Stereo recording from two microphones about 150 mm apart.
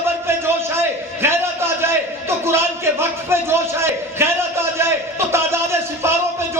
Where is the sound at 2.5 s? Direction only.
15° right (ahead or behind).